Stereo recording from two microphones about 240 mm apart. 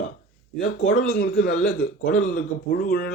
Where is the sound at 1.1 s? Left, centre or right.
Left.